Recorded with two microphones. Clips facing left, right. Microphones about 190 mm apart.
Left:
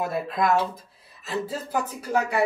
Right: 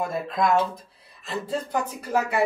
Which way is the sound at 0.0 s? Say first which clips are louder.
Even; 5° left (ahead or behind).